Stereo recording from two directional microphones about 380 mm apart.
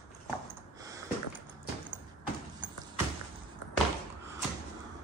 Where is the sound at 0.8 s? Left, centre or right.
Centre.